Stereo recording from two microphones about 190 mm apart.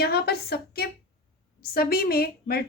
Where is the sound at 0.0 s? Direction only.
55° left (ahead or behind).